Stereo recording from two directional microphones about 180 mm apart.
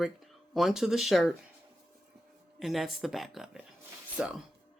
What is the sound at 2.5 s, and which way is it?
Speech, centre (ahead or behind).